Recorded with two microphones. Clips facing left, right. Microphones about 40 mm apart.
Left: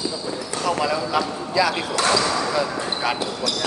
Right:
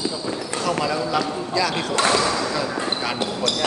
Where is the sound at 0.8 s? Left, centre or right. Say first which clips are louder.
Even; centre.